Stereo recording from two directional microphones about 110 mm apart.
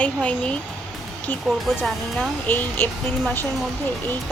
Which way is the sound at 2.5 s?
15° left (ahead or behind).